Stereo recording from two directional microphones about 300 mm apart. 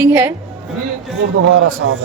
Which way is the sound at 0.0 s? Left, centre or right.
Centre.